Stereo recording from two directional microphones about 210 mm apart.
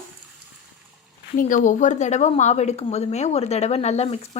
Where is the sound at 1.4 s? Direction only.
40° left (ahead or behind).